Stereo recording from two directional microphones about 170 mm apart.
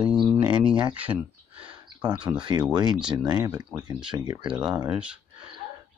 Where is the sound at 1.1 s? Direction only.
30° right (ahead or behind).